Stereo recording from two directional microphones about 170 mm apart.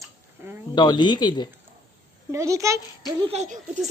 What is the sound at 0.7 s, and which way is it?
Speech, 25° left (ahead or behind).